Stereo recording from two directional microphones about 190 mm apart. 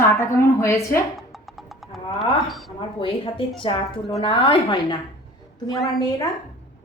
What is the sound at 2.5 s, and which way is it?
Speech, centre (ahead or behind).